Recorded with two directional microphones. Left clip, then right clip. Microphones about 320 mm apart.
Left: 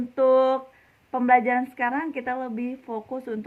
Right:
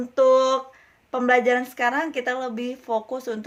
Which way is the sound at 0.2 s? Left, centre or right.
Centre.